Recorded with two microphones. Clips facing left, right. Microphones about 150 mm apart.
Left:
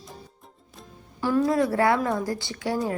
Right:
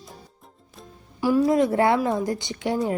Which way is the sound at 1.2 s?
10° right (ahead or behind).